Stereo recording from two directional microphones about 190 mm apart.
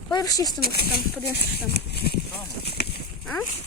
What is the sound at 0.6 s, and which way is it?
Speech, 55° left (ahead or behind).